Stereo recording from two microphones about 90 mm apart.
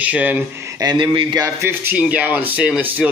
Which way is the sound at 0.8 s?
60° right (ahead or behind).